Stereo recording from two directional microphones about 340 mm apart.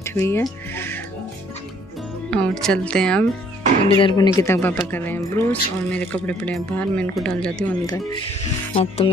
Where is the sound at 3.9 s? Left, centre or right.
Centre.